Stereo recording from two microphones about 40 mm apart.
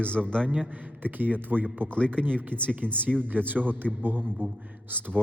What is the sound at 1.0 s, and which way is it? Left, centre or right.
Speech, right.